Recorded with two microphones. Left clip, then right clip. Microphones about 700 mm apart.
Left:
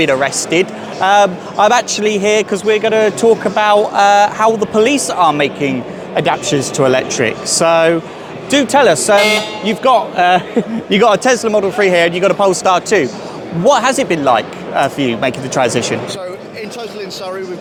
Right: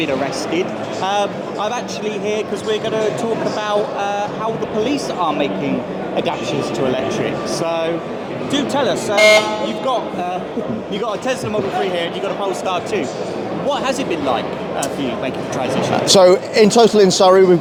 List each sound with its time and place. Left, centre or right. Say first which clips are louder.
0.0 s a man's voice: left 6 dB; left
4.9 s a man's voice: left 7 dB; left
11.8 s speech: left 9 dB; left
16.0 s speech: right 14 dB; right